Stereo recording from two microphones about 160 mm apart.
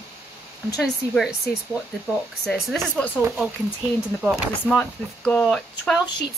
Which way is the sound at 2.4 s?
Centre (ahead or behind).